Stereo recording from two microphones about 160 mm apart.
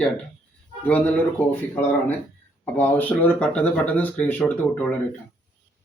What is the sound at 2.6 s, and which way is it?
Speech, 10° left (ahead or behind).